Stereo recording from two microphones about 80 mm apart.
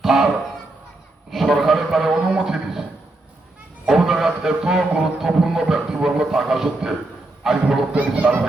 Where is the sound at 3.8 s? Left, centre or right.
Centre.